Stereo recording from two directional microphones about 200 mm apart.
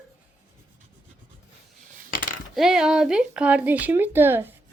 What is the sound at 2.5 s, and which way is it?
Speech, 5° right (ahead or behind).